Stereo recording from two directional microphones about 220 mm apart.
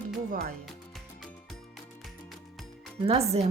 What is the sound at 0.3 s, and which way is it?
Speech, 40° right (ahead or behind).